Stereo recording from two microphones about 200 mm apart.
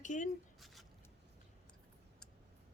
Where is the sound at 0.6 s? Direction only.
Centre (ahead or behind).